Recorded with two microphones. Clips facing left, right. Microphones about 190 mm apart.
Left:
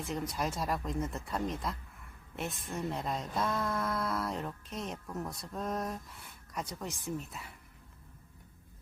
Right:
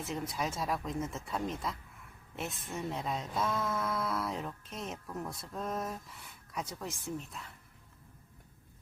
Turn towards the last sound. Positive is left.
turn(degrees=5)  # may be behind; listen again after turning